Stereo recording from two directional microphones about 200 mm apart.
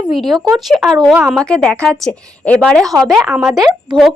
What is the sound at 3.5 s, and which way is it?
Speech, 20° right (ahead or behind).